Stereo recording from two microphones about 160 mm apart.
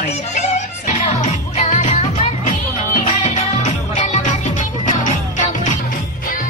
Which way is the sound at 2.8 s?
55° left (ahead or behind).